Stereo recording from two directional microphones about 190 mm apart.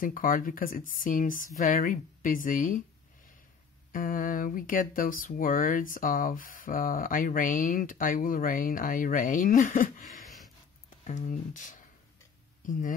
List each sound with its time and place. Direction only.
0.0 s speech: 45° left (ahead or behind)
3.9 s speech: 45° left (ahead or behind)
10.0 s a sound: centre (ahead or behind)
11.1 s speech: 40° left (ahead or behind)